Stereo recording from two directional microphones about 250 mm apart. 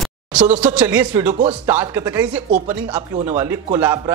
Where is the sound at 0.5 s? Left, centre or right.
Centre.